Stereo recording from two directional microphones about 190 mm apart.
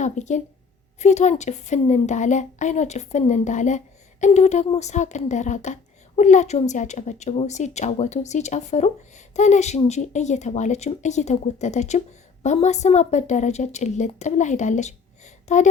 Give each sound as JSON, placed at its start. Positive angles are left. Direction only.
{"t": 0.0, "sound": "a woman's voice", "side_deg": 40}